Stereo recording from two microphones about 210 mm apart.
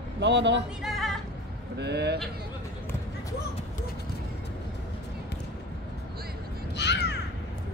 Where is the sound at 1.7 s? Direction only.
55° right (ahead or behind).